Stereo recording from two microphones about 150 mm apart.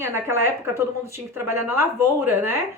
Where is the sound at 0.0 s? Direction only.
15° right (ahead or behind).